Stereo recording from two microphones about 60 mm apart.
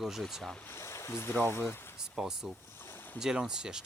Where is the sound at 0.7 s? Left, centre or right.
Left.